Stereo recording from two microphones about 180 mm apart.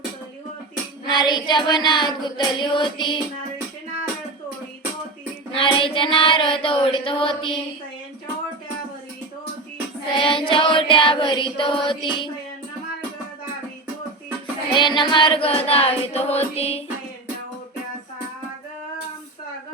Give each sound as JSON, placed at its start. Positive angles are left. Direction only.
{"t": 1.0, "sound": "child singing", "side_deg": 25}
{"t": 5.5, "sound": "child singing", "side_deg": 30}
{"t": 10.2, "sound": "child singing", "side_deg": 30}
{"t": 14.7, "sound": "music", "side_deg": 25}